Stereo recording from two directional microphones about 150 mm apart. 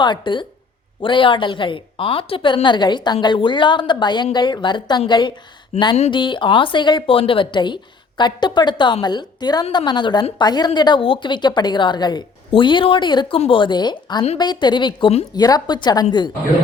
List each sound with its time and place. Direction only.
0.0 s a woman's voice: 30° left (ahead or behind)
5.7 s speech: 45° left (ahead or behind)
6.1 s a woman's voice: 35° left (ahead or behind)